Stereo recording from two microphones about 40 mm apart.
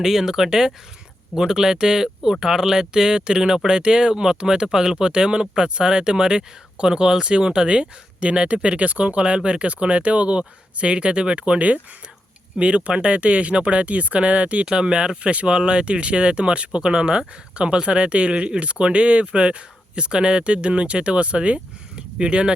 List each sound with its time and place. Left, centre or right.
0.0 s speech: centre